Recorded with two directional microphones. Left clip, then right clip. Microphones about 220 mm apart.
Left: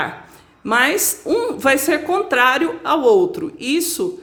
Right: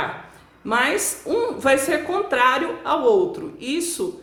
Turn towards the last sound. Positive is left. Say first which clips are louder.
# left 5 dB
turn(degrees=40)  # may be behind; listen again after turning